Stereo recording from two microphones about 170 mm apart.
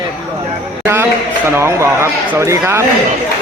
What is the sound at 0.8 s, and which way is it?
A man's voice, 15° right (ahead or behind).